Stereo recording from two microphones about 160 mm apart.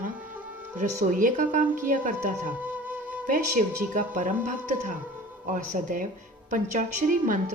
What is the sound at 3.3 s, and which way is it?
Speech, 55° right (ahead or behind).